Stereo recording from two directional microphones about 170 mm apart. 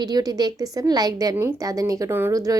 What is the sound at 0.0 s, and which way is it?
A woman's voice, 20° right (ahead or behind).